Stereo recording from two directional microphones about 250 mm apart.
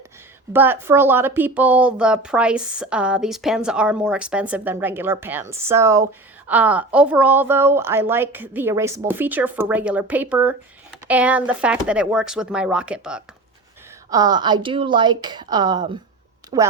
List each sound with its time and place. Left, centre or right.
0.5 s a woman's voice: centre
14.1 s a woman's voice: centre